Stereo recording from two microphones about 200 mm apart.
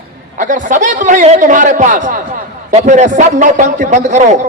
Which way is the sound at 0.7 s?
40° right (ahead or behind).